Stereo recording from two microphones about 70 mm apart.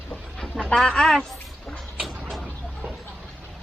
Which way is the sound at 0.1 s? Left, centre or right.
Centre.